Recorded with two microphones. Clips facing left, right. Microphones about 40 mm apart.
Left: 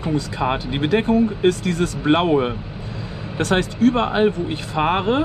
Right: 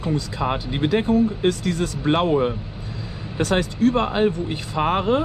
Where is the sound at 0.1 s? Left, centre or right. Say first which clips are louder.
Left 3 dB; left.